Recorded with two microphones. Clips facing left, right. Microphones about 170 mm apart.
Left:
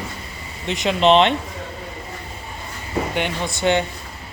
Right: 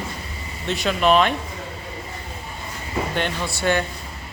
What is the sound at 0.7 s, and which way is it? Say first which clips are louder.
Speech: left 3 dB; 20° left (ahead or behind).